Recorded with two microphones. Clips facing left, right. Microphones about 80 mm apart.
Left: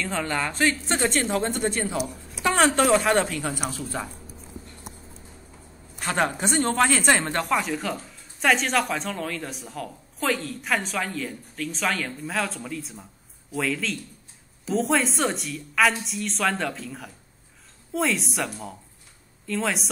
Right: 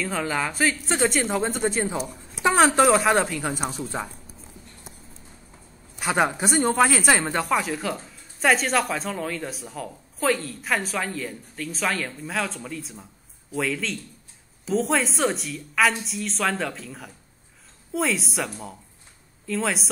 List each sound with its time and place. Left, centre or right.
0.0 s speech: centre
3.6 s a woman's voice: right
5.9 s speech: centre